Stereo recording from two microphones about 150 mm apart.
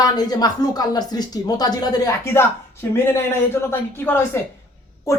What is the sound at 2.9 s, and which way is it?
Speech, 15° left (ahead or behind).